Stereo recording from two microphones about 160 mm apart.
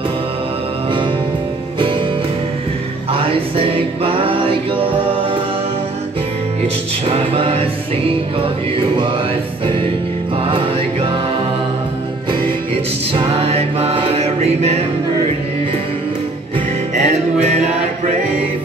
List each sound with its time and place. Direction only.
3.1 s music: 35° right (ahead or behind)
7.1 s music: 35° right (ahead or behind)
8.9 s music: 30° right (ahead or behind)
10.3 s music: 35° right (ahead or behind)
13.1 s music: 35° right (ahead or behind)
16.9 s music: 45° right (ahead or behind)